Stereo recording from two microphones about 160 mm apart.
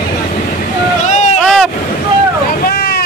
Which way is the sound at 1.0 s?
45° left (ahead or behind).